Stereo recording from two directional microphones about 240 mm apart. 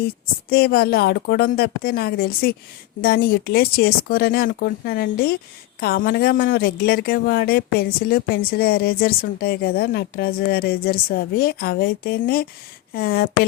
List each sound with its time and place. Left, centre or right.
0.5 s speech: left